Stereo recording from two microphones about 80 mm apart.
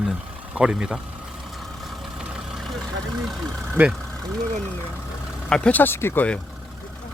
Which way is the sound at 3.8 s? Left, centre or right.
Right.